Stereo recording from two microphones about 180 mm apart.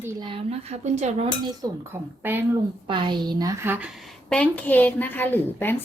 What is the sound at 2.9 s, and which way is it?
A woman's voice, 25° right (ahead or behind).